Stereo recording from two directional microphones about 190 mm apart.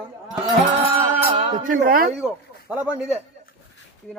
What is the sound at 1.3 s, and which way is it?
Speech, 45° right (ahead or behind).